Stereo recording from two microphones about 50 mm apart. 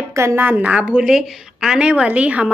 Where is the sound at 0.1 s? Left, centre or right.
Right.